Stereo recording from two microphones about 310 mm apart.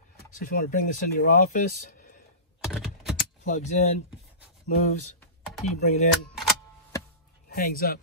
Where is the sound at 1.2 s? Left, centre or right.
Left.